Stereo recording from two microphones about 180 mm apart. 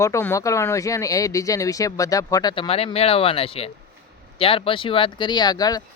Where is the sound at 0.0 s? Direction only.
15° left (ahead or behind).